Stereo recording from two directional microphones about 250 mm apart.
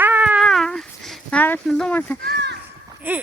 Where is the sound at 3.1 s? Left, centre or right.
Centre.